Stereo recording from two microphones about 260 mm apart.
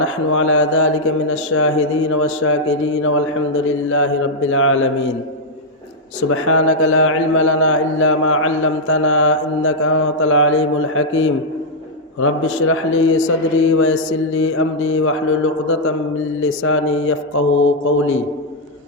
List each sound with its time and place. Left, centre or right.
0.0 s speech: left
0.6 s mantra: left
1.5 s speech: left
6.3 s speech: left
13.1 s mantra: left
14.3 s speech: left